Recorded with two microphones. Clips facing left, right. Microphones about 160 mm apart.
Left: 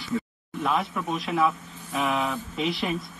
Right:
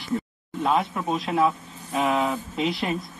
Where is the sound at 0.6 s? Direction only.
30° right (ahead or behind).